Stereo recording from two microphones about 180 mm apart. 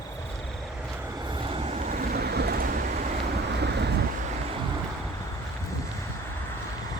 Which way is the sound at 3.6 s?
70° right (ahead or behind).